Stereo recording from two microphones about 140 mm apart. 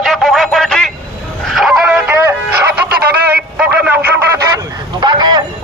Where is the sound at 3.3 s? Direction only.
10° right (ahead or behind).